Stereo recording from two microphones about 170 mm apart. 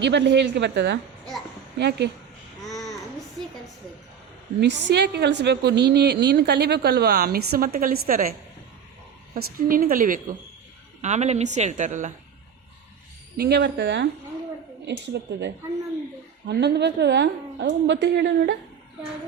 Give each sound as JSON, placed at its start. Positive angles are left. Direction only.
{"t": 0.0, "sound": "a woman's voice", "side_deg": -90}
{"t": 2.6, "sound": "babbling", "side_deg": 0}
{"t": 4.6, "sound": "a woman's voice", "side_deg": -90}
{"t": 9.3, "sound": "a woman's voice", "side_deg": -55}
{"t": 11.0, "sound": "a woman's voice", "side_deg": -40}
{"t": 13.3, "sound": "a woman's voice", "side_deg": -70}
{"t": 16.5, "sound": "a woman's voice", "side_deg": -80}